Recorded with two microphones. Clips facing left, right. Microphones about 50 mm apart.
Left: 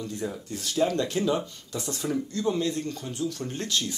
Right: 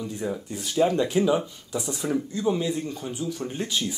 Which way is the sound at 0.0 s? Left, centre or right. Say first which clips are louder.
Right 3 dB; centre.